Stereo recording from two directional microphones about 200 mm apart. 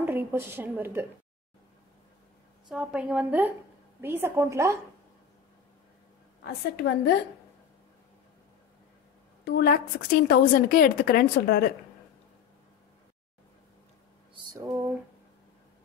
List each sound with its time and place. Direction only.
0.0 s a woman's voice: 10° right (ahead or behind)
2.7 s a woman's voice: 5° right (ahead or behind)
6.4 s a woman's voice: 55° left (ahead or behind)
9.4 s a woman's voice: 50° left (ahead or behind)
14.3 s a sound: 20° right (ahead or behind)